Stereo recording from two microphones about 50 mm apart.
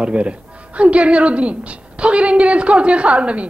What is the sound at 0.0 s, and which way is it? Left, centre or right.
Speech, right.